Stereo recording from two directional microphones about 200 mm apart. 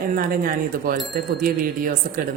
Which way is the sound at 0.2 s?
45° right (ahead or behind).